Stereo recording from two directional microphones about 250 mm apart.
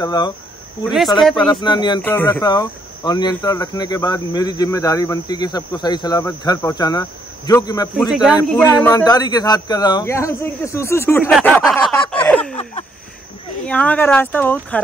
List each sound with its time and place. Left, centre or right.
0.0 s cricket: centre
1.4 s cricket: centre
8.1 s speech: centre
8.5 s cricket: centre
11.2 s speech: centre
13.7 s cricket: centre